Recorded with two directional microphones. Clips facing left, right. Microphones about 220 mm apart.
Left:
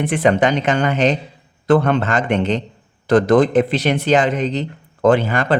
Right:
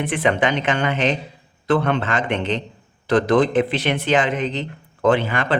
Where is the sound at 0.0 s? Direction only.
40° left (ahead or behind).